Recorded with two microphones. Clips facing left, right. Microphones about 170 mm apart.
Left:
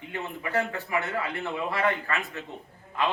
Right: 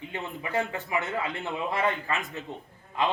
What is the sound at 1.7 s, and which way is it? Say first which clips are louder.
Speech: left 1 dB; 20° right (ahead or behind).